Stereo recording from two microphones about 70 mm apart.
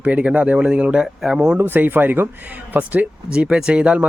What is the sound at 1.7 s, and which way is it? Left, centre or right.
Speech, right.